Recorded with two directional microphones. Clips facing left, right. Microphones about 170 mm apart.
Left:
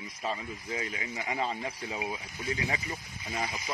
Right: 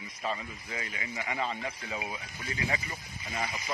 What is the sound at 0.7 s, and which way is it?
Speech, 30° left (ahead or behind).